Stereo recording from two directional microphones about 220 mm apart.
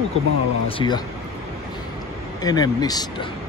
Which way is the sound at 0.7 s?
20° left (ahead or behind).